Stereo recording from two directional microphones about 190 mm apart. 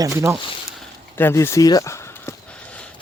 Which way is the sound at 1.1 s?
10° left (ahead or behind).